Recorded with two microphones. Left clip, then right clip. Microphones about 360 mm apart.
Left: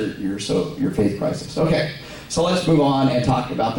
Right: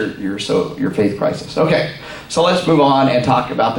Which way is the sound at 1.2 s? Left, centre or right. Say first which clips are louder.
Right 6 dB; centre.